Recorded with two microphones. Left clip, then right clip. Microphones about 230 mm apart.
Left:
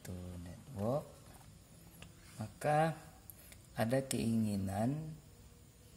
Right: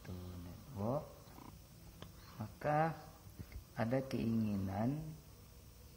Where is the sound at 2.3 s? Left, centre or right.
Left.